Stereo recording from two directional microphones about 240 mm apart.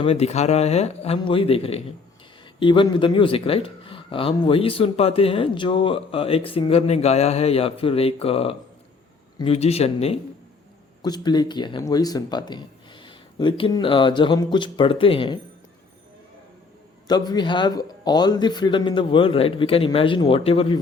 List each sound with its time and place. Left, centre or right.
0.0 s speech: left
17.1 s speech: centre